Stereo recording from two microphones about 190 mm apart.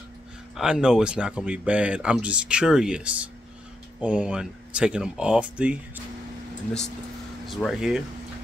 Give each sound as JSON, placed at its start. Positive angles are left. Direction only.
{"t": 0.6, "sound": "speech", "side_deg": -5}
{"t": 7.4, "sound": "speech", "side_deg": 0}